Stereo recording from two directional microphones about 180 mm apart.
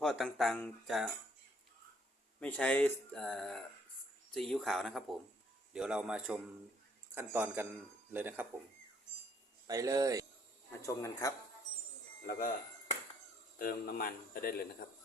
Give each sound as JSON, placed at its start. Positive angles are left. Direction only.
{"t": 0.0, "sound": "speech", "side_deg": 0}
{"t": 2.4, "sound": "a man's voice", "side_deg": 5}
{"t": 9.6, "sound": "speech", "side_deg": -20}
{"t": 10.7, "sound": "speech", "side_deg": 15}
{"t": 13.6, "sound": "a man's voice", "side_deg": 50}